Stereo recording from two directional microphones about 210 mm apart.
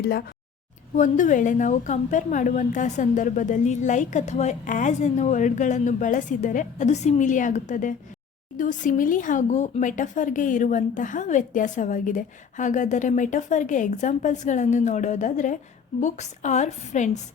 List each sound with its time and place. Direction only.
0.9 s a woman's voice: 35° left (ahead or behind)